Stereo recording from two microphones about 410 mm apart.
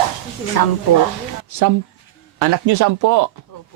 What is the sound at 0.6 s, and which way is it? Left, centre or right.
Speech, left.